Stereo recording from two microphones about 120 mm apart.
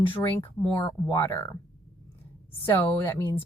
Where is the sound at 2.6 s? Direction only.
20° left (ahead or behind).